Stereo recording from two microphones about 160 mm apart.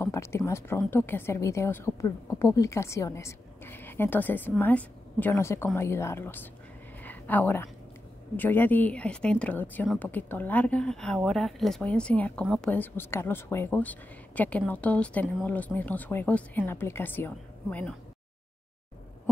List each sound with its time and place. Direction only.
0.0 s a woman's voice: 15° left (ahead or behind)
7.0 s a sound: 10° left (ahead or behind)
8.4 s a woman's voice: 10° left (ahead or behind)